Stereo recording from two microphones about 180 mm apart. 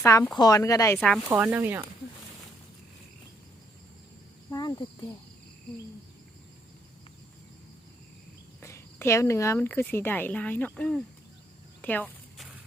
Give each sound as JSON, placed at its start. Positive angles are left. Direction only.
{"t": 0.0, "sound": "speech", "side_deg": 20}
{"t": 0.9, "sound": "speech", "side_deg": 5}
{"t": 1.3, "sound": "speech", "side_deg": -10}
{"t": 4.5, "sound": "cricket", "side_deg": 25}
{"t": 8.6, "sound": "speech", "side_deg": 15}
{"t": 11.8, "sound": "a sound", "side_deg": 10}